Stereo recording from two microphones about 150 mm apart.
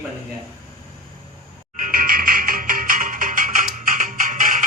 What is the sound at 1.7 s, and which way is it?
Music, 65° right (ahead or behind).